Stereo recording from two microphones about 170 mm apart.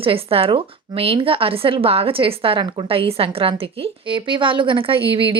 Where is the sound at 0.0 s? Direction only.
35° right (ahead or behind).